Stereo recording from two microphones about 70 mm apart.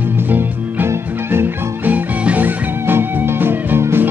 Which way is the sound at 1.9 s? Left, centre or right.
Right.